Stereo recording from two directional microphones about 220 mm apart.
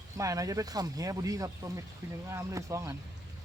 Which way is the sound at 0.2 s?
15° right (ahead or behind).